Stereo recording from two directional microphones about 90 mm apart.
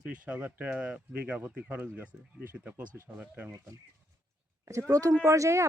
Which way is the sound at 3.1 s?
15° right (ahead or behind).